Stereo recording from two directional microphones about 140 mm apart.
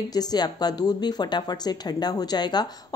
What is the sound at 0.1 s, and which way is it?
A woman's voice, 30° left (ahead or behind).